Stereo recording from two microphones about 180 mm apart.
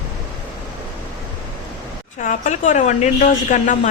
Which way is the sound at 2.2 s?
45° left (ahead or behind).